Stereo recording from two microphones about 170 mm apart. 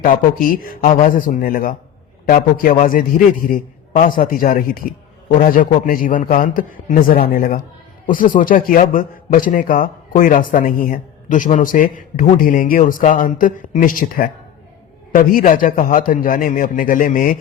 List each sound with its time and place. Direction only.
0.0 s a man's voice: 55° left (ahead or behind)